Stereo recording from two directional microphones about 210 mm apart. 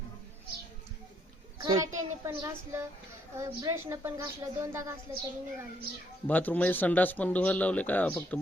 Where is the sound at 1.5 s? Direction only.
15° right (ahead or behind).